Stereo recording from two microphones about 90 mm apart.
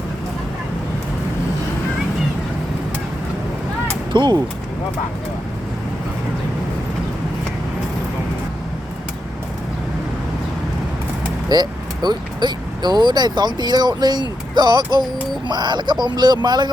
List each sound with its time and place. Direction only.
4.1 s speech: 55° right (ahead or behind)
11.4 s speech: 50° right (ahead or behind)